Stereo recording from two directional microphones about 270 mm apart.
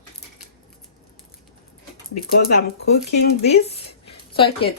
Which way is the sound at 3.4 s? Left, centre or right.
Left.